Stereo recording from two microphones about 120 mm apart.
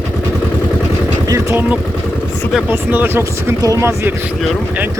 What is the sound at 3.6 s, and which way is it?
Speech, 30° right (ahead or behind).